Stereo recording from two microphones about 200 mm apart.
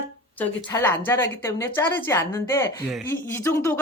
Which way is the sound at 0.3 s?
10° left (ahead or behind).